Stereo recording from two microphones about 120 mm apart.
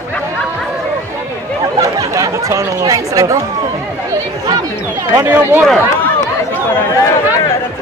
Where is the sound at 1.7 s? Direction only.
30° right (ahead or behind).